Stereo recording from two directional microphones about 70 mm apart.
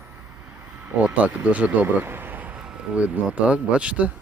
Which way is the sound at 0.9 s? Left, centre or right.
Right.